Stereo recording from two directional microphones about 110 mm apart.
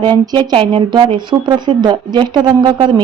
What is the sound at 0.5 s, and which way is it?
Speech, 50° right (ahead or behind).